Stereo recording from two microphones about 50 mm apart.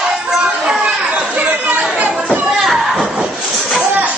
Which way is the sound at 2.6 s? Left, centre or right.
Centre.